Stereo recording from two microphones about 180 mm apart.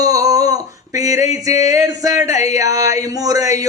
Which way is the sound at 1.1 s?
40° left (ahead or behind).